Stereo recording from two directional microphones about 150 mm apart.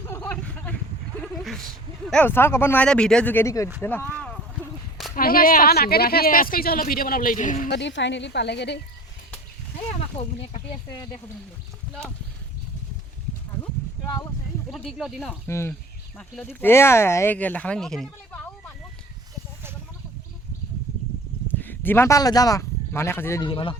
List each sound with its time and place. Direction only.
0.1 s a sound: 15° left (ahead or behind)
2.0 s speech: 10° left (ahead or behind)
5.1 s speech: 75° left (ahead or behind)
10.2 s speech: 40° left (ahead or behind)
10.9 s speech: 25° left (ahead or behind)
14.7 s speech: centre (ahead or behind)
15.4 s speech: 20° left (ahead or behind)
16.1 s speech: 5° left (ahead or behind)
16.6 s speech: 15° left (ahead or behind)
21.6 s speech: 15° left (ahead or behind)
23.4 s speech: 35° left (ahead or behind)